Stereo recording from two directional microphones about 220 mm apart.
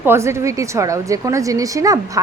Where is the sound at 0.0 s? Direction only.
10° right (ahead or behind).